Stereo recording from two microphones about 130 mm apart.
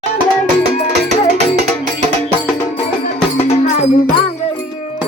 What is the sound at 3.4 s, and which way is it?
Music, 55° left (ahead or behind).